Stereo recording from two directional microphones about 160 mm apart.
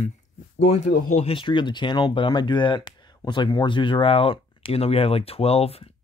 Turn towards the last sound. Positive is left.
turn(degrees=40)  # may be behind; listen again after turning